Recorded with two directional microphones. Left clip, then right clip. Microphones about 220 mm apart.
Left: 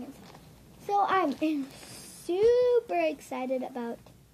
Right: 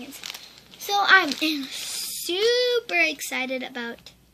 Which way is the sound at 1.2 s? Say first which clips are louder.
Right 4 dB; 15° right (ahead or behind).